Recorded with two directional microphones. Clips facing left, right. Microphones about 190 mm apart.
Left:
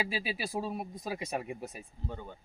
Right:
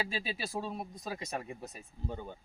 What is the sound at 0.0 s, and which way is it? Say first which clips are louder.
Speech: left 2 dB; 10° left (ahead or behind).